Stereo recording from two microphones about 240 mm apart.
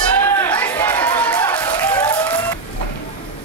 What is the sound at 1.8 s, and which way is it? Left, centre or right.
Applause, centre.